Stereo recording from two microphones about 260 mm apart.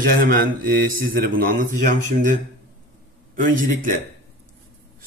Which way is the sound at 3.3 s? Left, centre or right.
Right.